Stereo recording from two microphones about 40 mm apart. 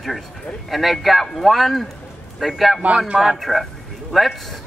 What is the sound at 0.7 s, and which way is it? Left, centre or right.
A man's voice, centre.